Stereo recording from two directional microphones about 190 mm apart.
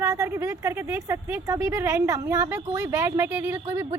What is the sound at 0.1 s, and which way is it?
A woman's voice, 20° right (ahead or behind).